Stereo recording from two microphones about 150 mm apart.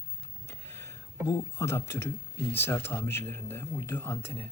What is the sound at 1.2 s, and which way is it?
Speech, 20° left (ahead or behind).